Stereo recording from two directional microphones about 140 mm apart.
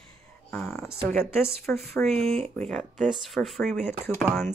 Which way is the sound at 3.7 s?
15° left (ahead or behind).